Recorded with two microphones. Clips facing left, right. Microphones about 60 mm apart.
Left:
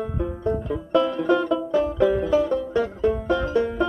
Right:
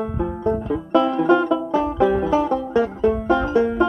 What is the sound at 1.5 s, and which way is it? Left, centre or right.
Banjo, centre.